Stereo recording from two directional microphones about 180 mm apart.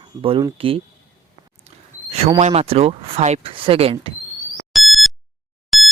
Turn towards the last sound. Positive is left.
turn(degrees=0)  # may be behind; listen again after turning